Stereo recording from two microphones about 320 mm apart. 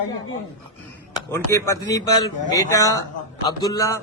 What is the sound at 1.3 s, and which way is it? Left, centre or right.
Speech, centre.